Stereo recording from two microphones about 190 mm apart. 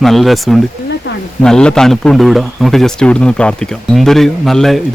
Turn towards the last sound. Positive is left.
turn(degrees=0)  # may be behind; listen again after turning